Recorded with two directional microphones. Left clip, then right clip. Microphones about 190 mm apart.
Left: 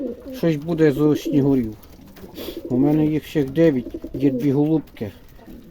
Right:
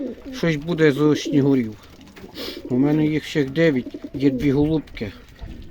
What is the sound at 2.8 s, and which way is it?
Speech, 5° left (ahead or behind).